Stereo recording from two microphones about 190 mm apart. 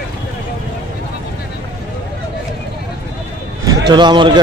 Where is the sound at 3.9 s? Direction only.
25° right (ahead or behind).